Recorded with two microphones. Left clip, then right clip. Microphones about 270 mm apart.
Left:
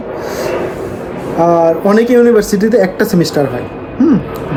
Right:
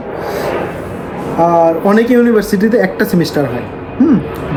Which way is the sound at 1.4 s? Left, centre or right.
Centre.